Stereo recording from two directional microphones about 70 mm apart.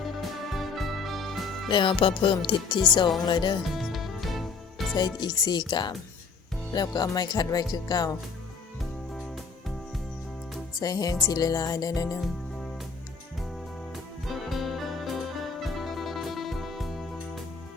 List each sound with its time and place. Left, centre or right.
0.0 s music: centre
2.3 s speech: left
3.7 s music: centre
4.9 s speech: left
6.7 s music: left
10.8 s music: left
13.9 s music: centre